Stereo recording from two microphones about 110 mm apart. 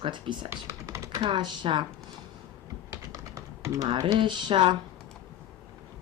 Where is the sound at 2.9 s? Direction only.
30° right (ahead or behind).